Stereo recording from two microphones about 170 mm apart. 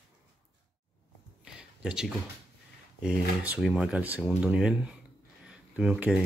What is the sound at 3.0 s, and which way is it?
Speech, 5° right (ahead or behind).